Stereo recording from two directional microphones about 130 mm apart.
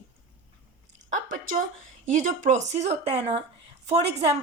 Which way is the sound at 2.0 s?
80° right.